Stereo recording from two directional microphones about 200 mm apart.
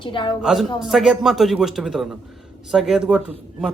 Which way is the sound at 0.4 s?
Centre (ahead or behind).